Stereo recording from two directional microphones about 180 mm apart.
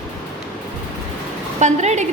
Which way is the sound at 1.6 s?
40° right (ahead or behind).